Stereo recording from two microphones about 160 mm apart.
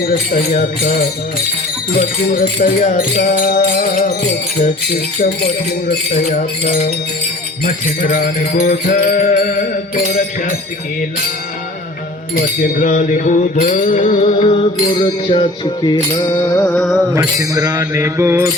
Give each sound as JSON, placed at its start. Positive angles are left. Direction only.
{"t": 0.0, "sound": "music", "side_deg": 65}
{"t": 7.6, "sound": "music", "side_deg": 65}
{"t": 8.7, "sound": "music", "side_deg": 55}
{"t": 12.4, "sound": "mantra", "side_deg": 60}
{"t": 14.3, "sound": "music", "side_deg": 35}
{"t": 16.4, "sound": "music", "side_deg": 15}
{"t": 17.2, "sound": "mantra", "side_deg": -20}